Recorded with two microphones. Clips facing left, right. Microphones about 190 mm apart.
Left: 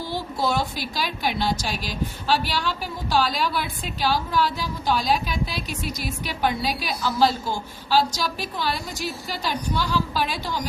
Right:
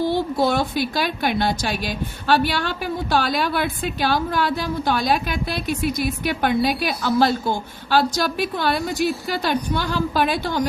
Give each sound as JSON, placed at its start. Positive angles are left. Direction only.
{"t": 0.1, "sound": "a woman's voice", "side_deg": -60}